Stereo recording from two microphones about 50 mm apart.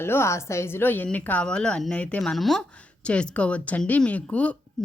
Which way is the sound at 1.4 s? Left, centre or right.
Centre.